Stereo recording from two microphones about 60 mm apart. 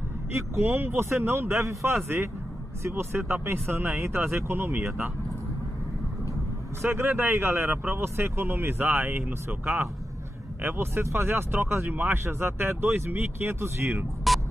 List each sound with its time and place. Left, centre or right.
0.3 s speech: right
1.7 s a man's voice: right
2.0 s speech: right
6.8 s speech: right
14.3 s music: centre